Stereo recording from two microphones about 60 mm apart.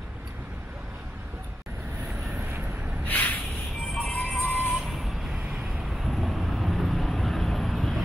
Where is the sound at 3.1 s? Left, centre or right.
Left.